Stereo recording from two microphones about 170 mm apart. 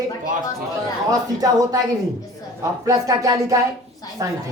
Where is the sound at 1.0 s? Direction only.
20° right (ahead or behind).